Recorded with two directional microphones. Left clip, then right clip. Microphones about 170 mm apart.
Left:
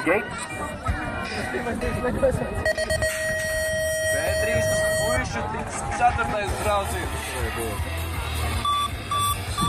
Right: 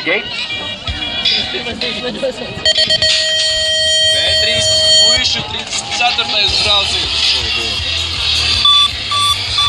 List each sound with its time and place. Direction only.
2.6 s a sound: 5° right (ahead or behind)
3.9 s fire alarm: 5° right (ahead or behind)
5.9 s speech: 10° left (ahead or behind)
6.8 s speech: 25° left (ahead or behind)
8.4 s beep: 55° left (ahead or behind)